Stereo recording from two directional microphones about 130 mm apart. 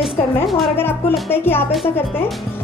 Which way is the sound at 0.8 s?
15° left (ahead or behind).